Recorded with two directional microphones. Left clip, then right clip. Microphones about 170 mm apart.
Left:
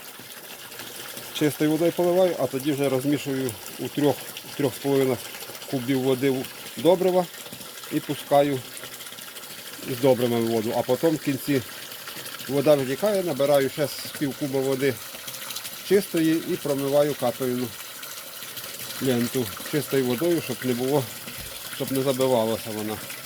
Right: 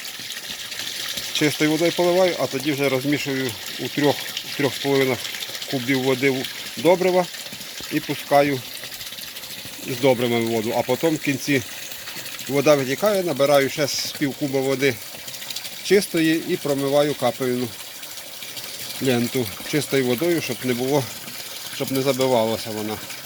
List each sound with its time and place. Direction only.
1.4 s speech: 5° left (ahead or behind)
10.0 s speech: 5° right (ahead or behind); by 17.5 s 20° right (ahead or behind)
19.0 s speech: 15° right (ahead or behind)